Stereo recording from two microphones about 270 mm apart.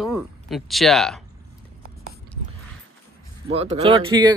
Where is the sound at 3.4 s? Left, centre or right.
Right.